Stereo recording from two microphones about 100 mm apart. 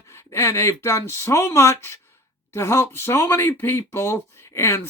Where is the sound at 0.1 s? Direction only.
25° left (ahead or behind).